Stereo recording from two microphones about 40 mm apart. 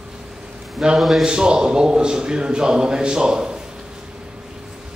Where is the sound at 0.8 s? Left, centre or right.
Centre.